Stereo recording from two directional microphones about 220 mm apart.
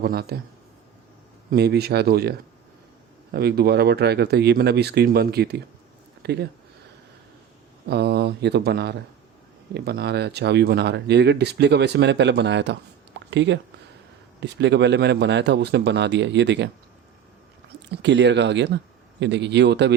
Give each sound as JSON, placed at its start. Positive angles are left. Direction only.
{"t": 0.0, "sound": "speech", "side_deg": -45}
{"t": 1.5, "sound": "speech", "side_deg": -45}
{"t": 3.3, "sound": "speech", "side_deg": -45}
{"t": 7.9, "sound": "speech", "side_deg": -50}
{"t": 13.1, "sound": "a sound", "side_deg": -55}
{"t": 14.4, "sound": "speech", "side_deg": -50}
{"t": 17.8, "sound": "speech", "side_deg": -55}